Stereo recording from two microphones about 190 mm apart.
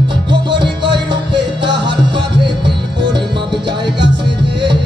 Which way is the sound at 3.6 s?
65° right (ahead or behind).